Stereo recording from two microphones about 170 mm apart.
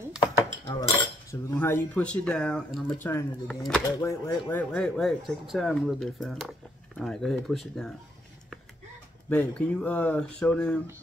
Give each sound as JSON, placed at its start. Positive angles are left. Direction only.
{"t": 0.3, "sound": "dishes", "side_deg": 20}
{"t": 1.3, "sound": "speech", "side_deg": 15}
{"t": 9.3, "sound": "speech", "side_deg": 10}